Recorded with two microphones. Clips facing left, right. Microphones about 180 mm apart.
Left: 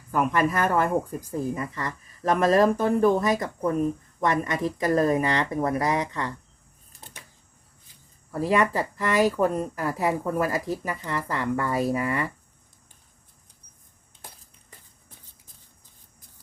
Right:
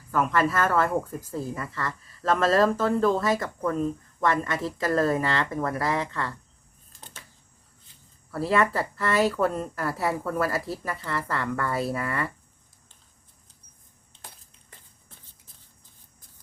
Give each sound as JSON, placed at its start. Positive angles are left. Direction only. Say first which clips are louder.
{"t": 0.1, "sound": "speech", "louder": "left 1 dB", "side_deg": 15}
{"t": 6.9, "sound": "a sound", "louder": "even", "side_deg": 15}
{"t": 8.3, "sound": "speech", "louder": "left 1 dB", "side_deg": 15}